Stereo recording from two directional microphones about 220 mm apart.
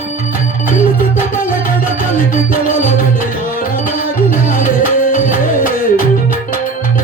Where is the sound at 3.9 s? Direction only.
40° left (ahead or behind).